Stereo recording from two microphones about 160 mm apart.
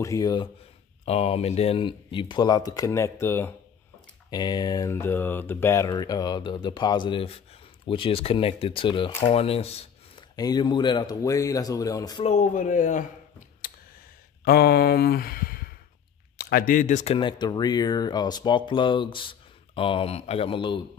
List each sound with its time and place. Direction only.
0.0 s speech: 20° left (ahead or behind)
1.0 s speech: 40° left (ahead or behind); by 3.5 s 15° left (ahead or behind)
4.3 s speech: 25° left (ahead or behind)
10.3 s speech: 25° left (ahead or behind)
12.2 s speech: 45° left (ahead or behind)
14.4 s speech: 80° left; by 20.8 s 30° left (ahead or behind)